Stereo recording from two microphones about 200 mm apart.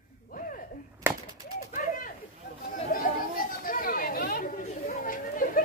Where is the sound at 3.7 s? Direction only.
45° left (ahead or behind).